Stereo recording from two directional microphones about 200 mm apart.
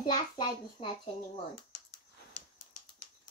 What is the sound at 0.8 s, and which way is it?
Speech, 30° left (ahead or behind).